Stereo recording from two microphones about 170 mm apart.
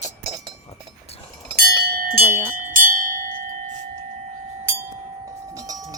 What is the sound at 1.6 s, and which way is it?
Bell, 65° right (ahead or behind).